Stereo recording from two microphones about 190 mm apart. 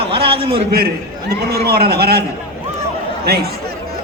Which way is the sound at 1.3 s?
55° right (ahead or behind).